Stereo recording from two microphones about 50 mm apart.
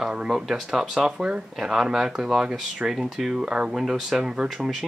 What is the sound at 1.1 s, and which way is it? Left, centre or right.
Speech, centre.